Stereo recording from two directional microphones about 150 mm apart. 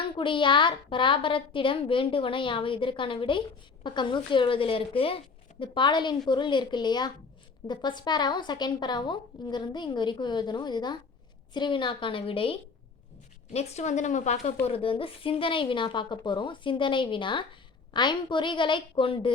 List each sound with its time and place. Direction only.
0.2 s a woman's voice: 35° left (ahead or behind); by 14.5 s 50° left (ahead or behind)
14.6 s a woman's voice: 40° left (ahead or behind)